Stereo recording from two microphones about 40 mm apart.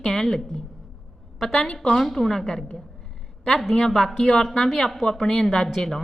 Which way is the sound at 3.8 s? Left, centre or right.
Centre.